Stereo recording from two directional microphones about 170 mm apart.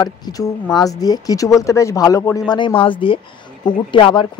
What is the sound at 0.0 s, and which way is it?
Speech, 20° left (ahead or behind).